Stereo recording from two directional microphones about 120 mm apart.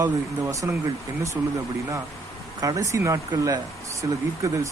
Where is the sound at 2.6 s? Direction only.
30° right (ahead or behind).